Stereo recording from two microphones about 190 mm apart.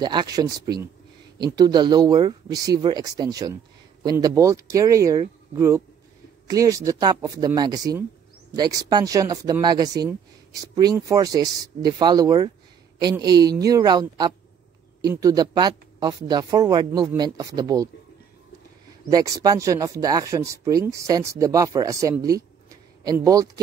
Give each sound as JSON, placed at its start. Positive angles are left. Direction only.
{"t": 0.0, "sound": "a woman's voice", "side_deg": -25}
{"t": 19.0, "sound": "speech", "side_deg": -20}